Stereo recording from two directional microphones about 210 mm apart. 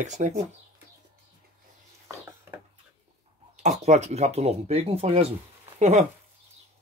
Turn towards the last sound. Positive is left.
turn(degrees=-35)  # may be behind; listen again after turning